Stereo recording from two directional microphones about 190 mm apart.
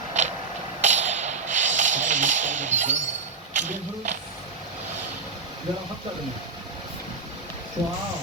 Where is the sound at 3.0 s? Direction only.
75° right (ahead or behind).